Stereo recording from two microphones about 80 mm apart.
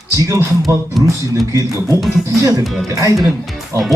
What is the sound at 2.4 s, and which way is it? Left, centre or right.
Speech, right.